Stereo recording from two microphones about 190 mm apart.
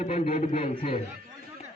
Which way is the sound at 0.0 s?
35° left (ahead or behind).